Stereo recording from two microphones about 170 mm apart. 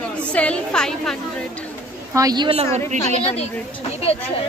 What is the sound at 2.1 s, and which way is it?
Speech, 25° right (ahead or behind).